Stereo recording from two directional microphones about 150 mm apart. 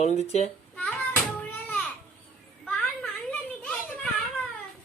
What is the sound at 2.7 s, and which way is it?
Children playing, 5° left (ahead or behind).